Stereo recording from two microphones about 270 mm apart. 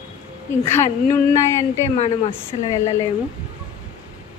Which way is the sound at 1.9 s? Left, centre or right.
Left.